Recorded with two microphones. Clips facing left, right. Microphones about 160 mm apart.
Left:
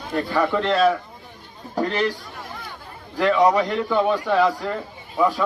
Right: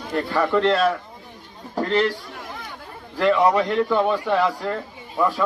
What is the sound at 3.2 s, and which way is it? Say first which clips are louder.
A man's voice: even; centre (ahead or behind).